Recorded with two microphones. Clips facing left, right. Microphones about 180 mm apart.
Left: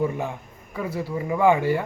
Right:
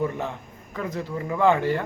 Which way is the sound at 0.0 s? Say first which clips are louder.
Left 2 dB; 10° left (ahead or behind).